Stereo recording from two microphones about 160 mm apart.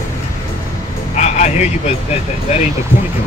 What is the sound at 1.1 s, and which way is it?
Speech, 45° left (ahead or behind).